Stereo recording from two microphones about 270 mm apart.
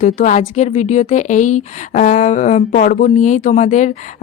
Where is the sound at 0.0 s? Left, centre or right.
Left.